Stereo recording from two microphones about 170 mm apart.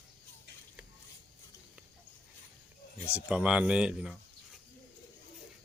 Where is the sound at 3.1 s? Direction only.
5° right (ahead or behind).